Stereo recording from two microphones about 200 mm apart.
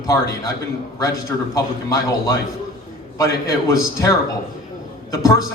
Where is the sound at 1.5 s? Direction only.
15° left (ahead or behind).